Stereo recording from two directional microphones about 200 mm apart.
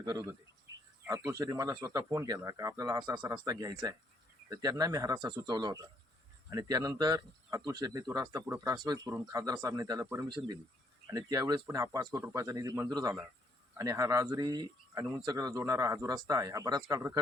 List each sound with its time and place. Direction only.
0.0 s speech: 20° right (ahead or behind)
0.7 s a sound: 65° right (ahead or behind)
1.0 s speech: 15° right (ahead or behind)